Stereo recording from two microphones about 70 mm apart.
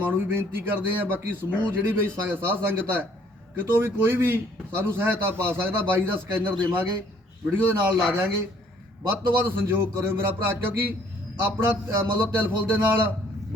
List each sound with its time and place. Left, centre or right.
0.2 s a man's voice: right
7.7 s a man's voice: right